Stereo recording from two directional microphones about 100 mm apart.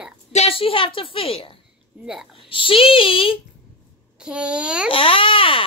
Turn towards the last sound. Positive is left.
turn(degrees=65)  # may be behind; listen again after turning